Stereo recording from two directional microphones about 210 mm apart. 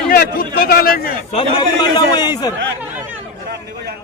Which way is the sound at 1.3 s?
20° left (ahead or behind).